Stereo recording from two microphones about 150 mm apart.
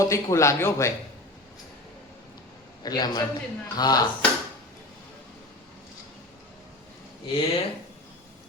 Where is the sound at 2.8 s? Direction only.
25° left (ahead or behind).